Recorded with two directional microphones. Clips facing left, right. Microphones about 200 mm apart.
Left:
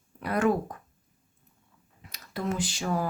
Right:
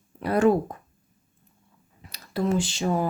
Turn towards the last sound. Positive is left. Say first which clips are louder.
# right 5 dB
turn(degrees=-25)  # may be behind; listen again after turning